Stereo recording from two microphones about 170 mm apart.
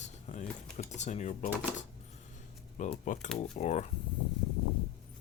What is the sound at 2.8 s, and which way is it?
Speech, 45° left (ahead or behind).